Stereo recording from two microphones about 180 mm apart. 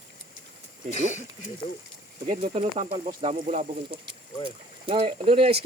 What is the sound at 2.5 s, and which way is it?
Speech, 30° right (ahead or behind).